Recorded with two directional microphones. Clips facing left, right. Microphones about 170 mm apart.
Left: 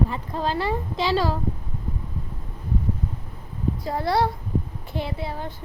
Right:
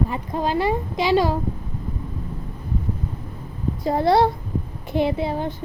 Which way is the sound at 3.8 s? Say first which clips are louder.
Right 6 dB; 20° right (ahead or behind).